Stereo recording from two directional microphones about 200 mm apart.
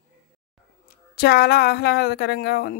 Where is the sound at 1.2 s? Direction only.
55° left (ahead or behind).